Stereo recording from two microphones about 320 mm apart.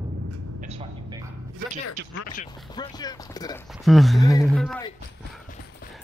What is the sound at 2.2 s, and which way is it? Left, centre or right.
Speech, left.